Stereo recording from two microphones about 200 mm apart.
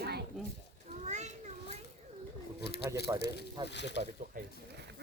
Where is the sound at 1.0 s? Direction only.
35° right (ahead or behind).